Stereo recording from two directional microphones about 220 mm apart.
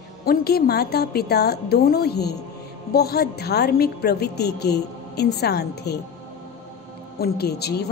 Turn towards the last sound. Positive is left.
turn(degrees=45)  # may be behind; listen again after turning